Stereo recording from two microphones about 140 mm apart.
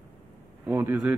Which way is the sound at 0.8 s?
10° right (ahead or behind).